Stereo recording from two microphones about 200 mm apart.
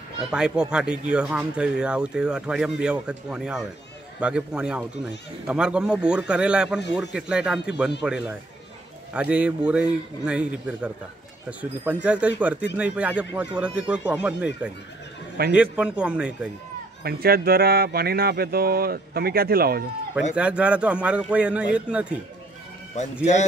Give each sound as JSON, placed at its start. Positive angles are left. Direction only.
{"t": 0.3, "sound": "speech", "side_deg": -5}
{"t": 17.0, "sound": "speech", "side_deg": -50}
{"t": 20.3, "sound": "speech", "side_deg": -5}